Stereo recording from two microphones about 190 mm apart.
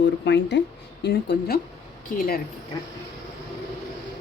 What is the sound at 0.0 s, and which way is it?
Speech, 65° left (ahead or behind).